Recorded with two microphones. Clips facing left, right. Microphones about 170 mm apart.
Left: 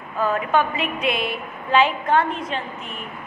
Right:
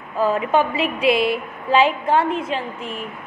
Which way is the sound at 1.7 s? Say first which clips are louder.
Right 2 dB; 30° right (ahead or behind).